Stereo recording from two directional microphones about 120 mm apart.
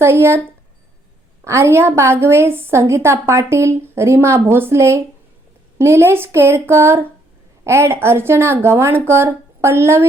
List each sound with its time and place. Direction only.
0.0 s a woman's voice: 20° right (ahead or behind)
1.5 s a woman's voice: 25° right (ahead or behind)